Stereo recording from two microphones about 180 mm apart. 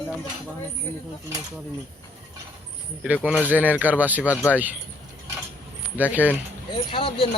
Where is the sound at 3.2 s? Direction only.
10° right (ahead or behind).